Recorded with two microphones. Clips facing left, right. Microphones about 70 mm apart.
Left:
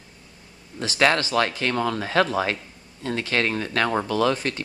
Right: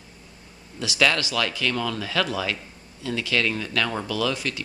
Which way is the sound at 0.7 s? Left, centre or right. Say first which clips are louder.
Left 2 dB; left.